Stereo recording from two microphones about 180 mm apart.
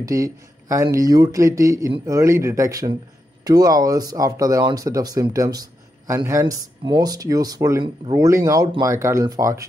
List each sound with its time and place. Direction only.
0.0 s speech: 20° right (ahead or behind)